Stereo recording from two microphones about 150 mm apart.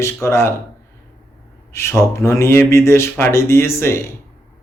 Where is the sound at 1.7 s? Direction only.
15° left (ahead or behind).